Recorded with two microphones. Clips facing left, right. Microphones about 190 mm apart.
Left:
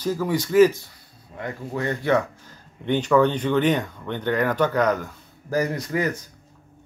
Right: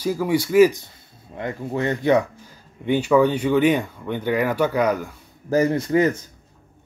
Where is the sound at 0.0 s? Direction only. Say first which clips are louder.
Right 3 dB; 10° right (ahead or behind).